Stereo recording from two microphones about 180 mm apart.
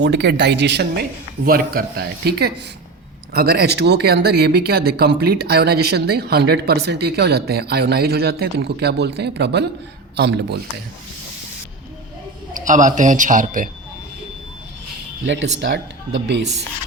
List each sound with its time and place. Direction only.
0.0 s speech: 70° right (ahead or behind)
1.5 s speech: 55° right (ahead or behind)
12.5 s speech: 45° right (ahead or behind)
15.3 s speech: 80° right